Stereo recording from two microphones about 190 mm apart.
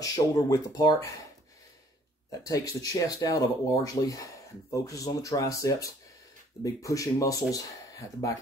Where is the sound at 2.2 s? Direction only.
20° left (ahead or behind).